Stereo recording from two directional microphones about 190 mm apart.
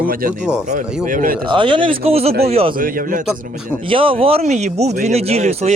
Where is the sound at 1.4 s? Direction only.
25° right (ahead or behind).